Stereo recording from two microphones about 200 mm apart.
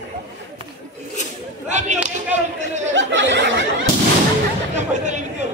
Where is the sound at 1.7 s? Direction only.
35° right (ahead or behind).